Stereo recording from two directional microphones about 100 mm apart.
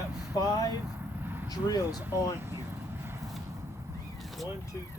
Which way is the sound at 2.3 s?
20° right (ahead or behind).